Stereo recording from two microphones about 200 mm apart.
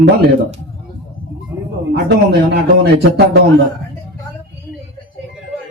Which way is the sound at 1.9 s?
55° right (ahead or behind).